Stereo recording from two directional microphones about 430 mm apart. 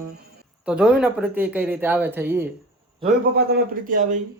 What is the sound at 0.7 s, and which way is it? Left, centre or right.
Speech, centre.